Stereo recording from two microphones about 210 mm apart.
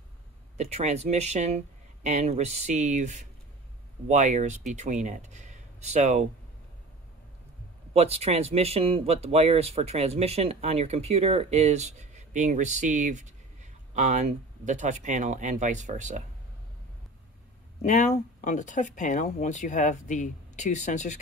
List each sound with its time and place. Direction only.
0.6 s speech: 30° right (ahead or behind)
7.9 s speech: 30° right (ahead or behind)
17.8 s speech: 35° left (ahead or behind)